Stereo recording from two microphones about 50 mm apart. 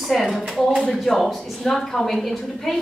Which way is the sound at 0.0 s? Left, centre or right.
Centre.